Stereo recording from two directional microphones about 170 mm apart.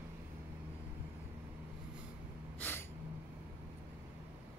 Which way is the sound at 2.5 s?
10° left (ahead or behind).